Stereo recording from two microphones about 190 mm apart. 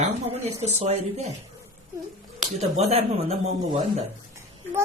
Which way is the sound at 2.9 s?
35° right (ahead or behind).